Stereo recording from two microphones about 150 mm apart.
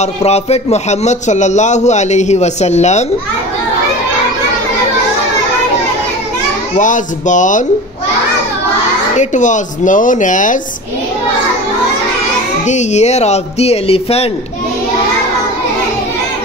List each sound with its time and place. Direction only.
0.0 s a man's voice: 45° left (ahead or behind)
6.8 s speech: 55° left (ahead or behind)
9.1 s speech: 55° left (ahead or behind)
12.6 s a man's voice: 50° left (ahead or behind)